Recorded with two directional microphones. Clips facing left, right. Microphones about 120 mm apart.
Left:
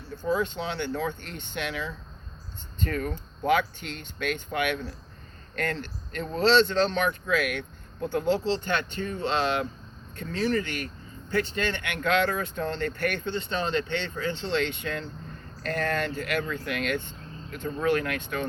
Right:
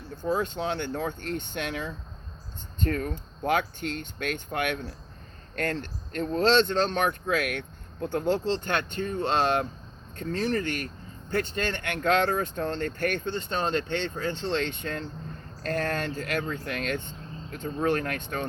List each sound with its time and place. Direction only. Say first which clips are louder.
0.3 s speech: even; 50° right (ahead or behind)